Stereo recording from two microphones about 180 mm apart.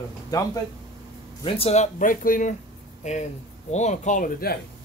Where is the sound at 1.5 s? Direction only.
35° left (ahead or behind); by 4.5 s 50° left (ahead or behind).